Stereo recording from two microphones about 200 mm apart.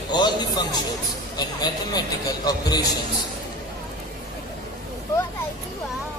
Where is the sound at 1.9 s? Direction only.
20° left (ahead or behind).